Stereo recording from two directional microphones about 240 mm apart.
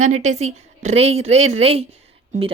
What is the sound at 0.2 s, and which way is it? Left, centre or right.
A woman's voice, right.